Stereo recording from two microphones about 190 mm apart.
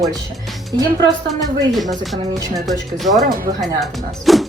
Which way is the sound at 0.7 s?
20° right (ahead or behind).